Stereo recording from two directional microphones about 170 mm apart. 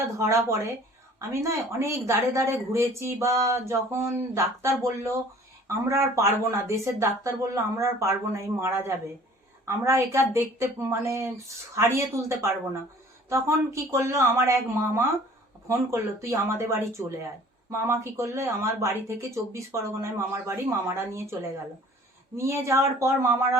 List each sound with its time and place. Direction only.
0.2 s speech: 15° right (ahead or behind)
22.4 s speech: 15° right (ahead or behind)